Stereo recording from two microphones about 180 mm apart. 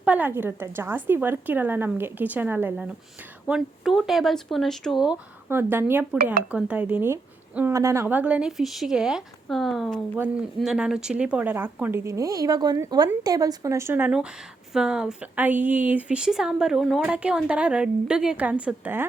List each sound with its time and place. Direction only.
0.0 s a woman's voice: 10° right (ahead or behind)